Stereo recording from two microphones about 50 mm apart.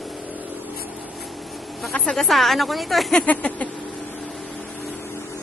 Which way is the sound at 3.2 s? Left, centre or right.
Left.